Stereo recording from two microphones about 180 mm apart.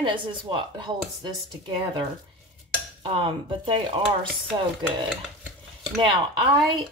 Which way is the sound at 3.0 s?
30° right (ahead or behind).